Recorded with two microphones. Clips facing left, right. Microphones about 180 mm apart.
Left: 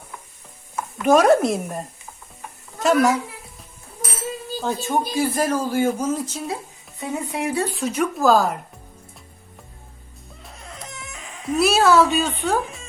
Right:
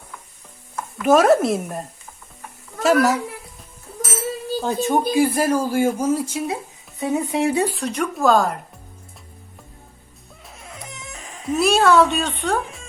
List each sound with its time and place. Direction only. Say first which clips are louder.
1.0 s speech: even; centre (ahead or behind)
2.8 s speech: right 1 dB; 5° right (ahead or behind)
4.6 s speech: right 3 dB; 20° right (ahead or behind)
7.0 s speech: right 5 dB; 25° right (ahead or behind)
7.7 s speech: left 1 dB; centre (ahead or behind)
10.4 s baby cry: even; centre (ahead or behind)
11.1 s a sound: right 1 dB; 40° right (ahead or behind)
11.4 s speech: even; centre (ahead or behind)